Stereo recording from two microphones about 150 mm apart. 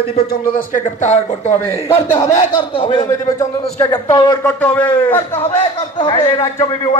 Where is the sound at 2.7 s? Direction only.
35° left (ahead or behind).